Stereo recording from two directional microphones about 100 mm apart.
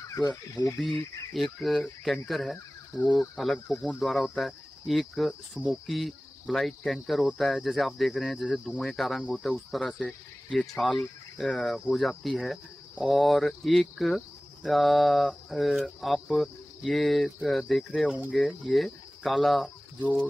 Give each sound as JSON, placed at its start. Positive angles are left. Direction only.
{"t": 0.7, "sound": "speech", "side_deg": 0}
{"t": 20.0, "sound": "speech", "side_deg": 15}